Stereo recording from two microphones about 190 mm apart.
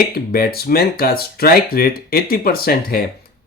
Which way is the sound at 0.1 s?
50° left (ahead or behind).